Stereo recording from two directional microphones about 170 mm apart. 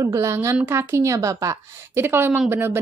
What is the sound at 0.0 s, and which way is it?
Speech, 20° right (ahead or behind).